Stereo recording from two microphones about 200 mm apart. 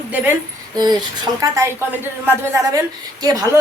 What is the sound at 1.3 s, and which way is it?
A woman's voice, 15° right (ahead or behind).